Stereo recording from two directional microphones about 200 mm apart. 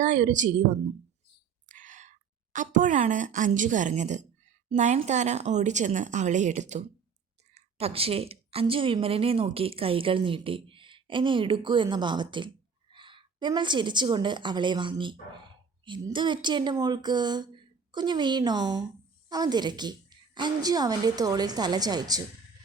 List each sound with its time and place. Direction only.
0.0 s a woman's voice: 40° right (ahead or behind); by 22.2 s 20° right (ahead or behind)